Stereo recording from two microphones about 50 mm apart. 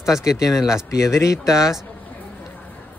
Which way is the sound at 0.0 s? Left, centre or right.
Centre.